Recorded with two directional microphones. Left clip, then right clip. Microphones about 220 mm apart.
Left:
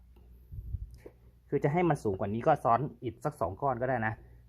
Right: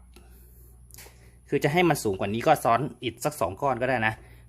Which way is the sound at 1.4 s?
20° right (ahead or behind).